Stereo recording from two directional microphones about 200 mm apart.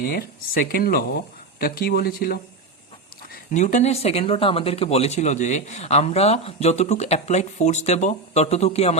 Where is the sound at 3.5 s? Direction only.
40° left (ahead or behind).